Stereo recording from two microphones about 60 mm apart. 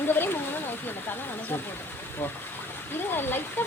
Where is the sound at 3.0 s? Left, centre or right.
Left.